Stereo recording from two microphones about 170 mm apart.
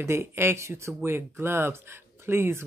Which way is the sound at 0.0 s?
15° right (ahead or behind).